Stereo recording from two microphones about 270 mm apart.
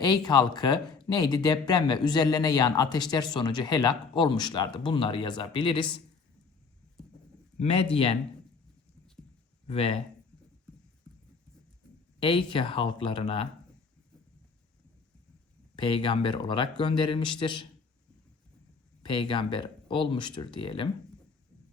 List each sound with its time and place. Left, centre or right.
0.0 s speech: centre
7.6 s speech: left
9.6 s speech: left
12.2 s speech: centre
15.7 s speech: centre
19.0 s speech: centre